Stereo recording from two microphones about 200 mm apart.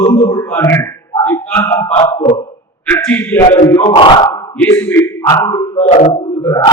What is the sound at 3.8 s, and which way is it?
Speech, 25° left (ahead or behind).